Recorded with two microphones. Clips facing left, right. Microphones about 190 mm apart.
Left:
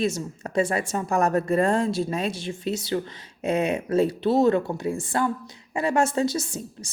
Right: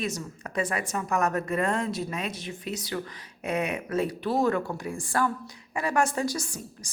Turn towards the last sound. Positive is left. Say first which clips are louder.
# left 4 dB
turn(degrees=25)  # may be behind; listen again after turning